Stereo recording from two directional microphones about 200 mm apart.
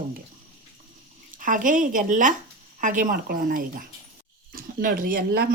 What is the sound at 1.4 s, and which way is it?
Speech, 40° right (ahead or behind).